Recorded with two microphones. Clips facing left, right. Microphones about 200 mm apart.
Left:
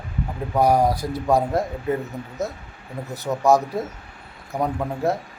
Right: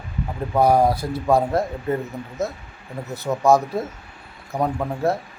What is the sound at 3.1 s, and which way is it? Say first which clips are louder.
Speech: right 1 dB; 15° left (ahead or behind).